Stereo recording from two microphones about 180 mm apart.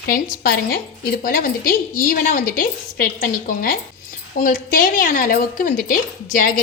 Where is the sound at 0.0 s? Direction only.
55° left (ahead or behind).